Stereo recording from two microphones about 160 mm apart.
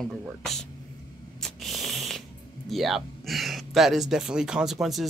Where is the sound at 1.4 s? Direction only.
Centre (ahead or behind).